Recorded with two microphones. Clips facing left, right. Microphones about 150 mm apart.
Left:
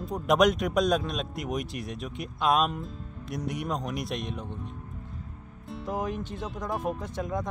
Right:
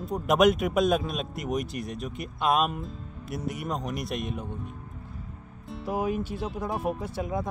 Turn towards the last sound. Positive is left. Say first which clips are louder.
# right 1 dB
turn(degrees=-5)  # may be behind; listen again after turning